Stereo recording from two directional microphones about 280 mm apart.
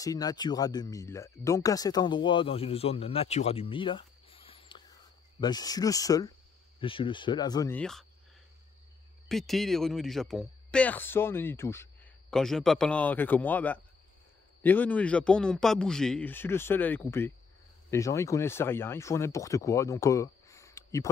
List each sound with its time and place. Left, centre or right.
0.0 s speech: centre
9.3 s speech: centre